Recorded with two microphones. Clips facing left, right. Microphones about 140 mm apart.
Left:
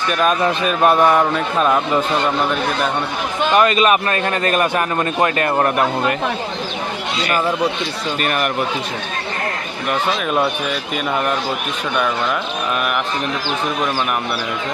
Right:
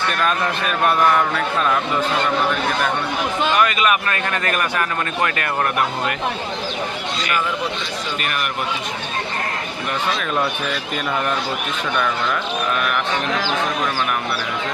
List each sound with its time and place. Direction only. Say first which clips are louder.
0.1 s a man's voice: left 8 dB; 20° left (ahead or behind)
3.5 s a man's voice: left 6 dB; 25° left (ahead or behind)
7.2 s speech: left 5 dB; 35° left (ahead or behind)